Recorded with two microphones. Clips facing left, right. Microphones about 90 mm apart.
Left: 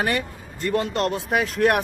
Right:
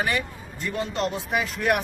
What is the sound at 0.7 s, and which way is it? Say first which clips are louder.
Speech: left 4 dB; 65° left (ahead or behind).